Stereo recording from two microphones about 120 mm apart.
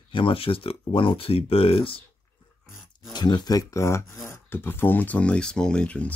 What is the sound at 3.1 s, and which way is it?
Speech, 35° left (ahead or behind).